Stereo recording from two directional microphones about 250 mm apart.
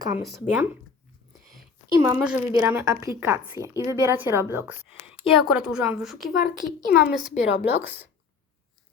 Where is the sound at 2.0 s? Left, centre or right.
Centre.